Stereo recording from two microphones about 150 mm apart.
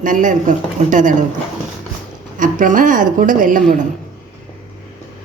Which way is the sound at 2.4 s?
60° right (ahead or behind).